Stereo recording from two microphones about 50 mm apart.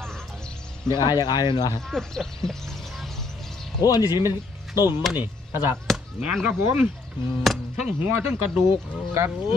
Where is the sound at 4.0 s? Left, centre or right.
Right.